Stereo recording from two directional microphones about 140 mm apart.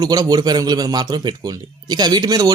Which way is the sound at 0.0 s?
30° right (ahead or behind).